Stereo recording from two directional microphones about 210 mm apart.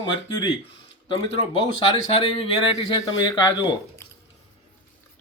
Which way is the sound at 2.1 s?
25° left (ahead or behind).